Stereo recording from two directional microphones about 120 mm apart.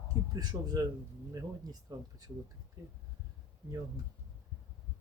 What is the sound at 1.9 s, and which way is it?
Speech, 30° right (ahead or behind).